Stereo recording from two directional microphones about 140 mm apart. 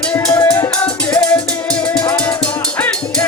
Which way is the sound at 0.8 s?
10° left (ahead or behind).